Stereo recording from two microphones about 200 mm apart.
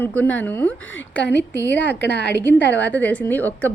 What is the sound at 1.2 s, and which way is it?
Speech, 60° left (ahead or behind).